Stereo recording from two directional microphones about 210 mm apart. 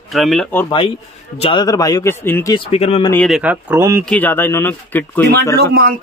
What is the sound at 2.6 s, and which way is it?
Speech, 25° left (ahead or behind).